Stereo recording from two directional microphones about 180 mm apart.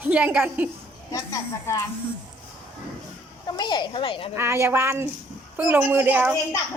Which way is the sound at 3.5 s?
25° left (ahead or behind).